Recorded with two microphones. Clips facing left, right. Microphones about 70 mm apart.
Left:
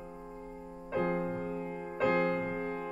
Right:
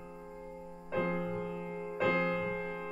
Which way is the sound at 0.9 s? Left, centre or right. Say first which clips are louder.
Left 2 dB; centre.